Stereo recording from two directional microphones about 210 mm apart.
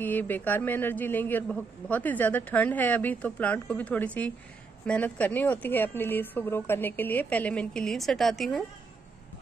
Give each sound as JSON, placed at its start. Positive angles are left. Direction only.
{"t": 0.0, "sound": "a man's voice", "side_deg": 10}